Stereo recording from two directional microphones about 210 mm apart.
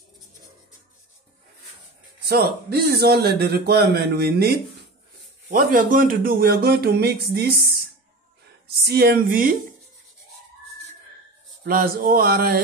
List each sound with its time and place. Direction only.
2.2 s speech: 50° right (ahead or behind)
5.5 s speech: 40° right (ahead or behind)
8.6 s speech: 50° right (ahead or behind)
11.6 s speech: 45° right (ahead or behind)